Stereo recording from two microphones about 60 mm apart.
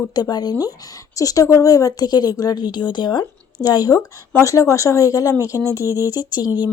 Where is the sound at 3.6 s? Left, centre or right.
Left.